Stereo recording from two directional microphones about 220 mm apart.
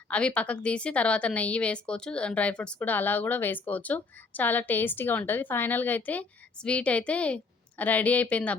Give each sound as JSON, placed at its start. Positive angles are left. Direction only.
{"t": 0.1, "sound": "a woman's voice", "side_deg": 5}